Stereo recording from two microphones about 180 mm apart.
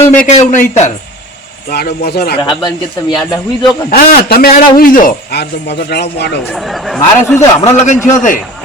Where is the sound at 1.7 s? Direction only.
60° left (ahead or behind).